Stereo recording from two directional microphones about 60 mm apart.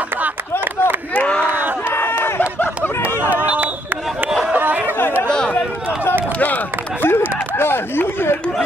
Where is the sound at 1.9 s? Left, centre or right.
Left.